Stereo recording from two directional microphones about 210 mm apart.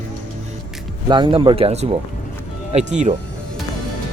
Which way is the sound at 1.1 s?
20° right (ahead or behind).